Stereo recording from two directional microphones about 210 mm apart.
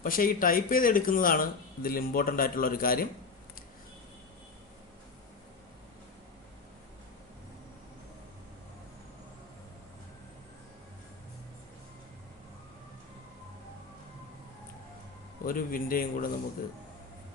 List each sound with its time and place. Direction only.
0.0 s speech: 40° left (ahead or behind)
15.4 s speech: 40° left (ahead or behind)